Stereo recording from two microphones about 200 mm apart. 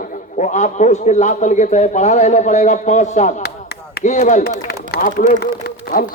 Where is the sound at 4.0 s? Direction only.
35° left (ahead or behind).